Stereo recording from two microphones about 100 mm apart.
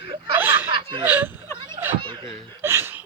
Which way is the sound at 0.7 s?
60° right (ahead or behind).